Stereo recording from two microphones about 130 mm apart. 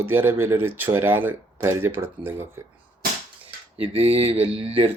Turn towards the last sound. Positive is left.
turn(degrees=-45)  # may be behind; listen again after turning